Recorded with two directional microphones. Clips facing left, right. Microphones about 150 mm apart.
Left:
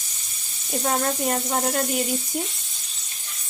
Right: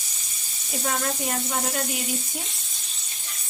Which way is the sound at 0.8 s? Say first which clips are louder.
Left 4 dB; 40° left (ahead or behind).